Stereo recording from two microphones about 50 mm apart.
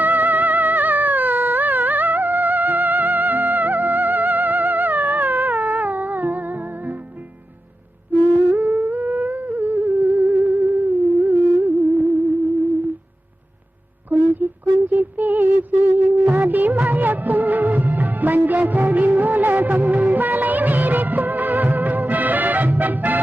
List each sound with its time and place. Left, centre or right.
0.0 s music: right
8.4 s music: right
14.1 s a sound: right